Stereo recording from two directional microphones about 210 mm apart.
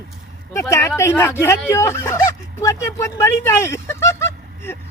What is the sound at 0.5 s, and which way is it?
Speech, 15° left (ahead or behind).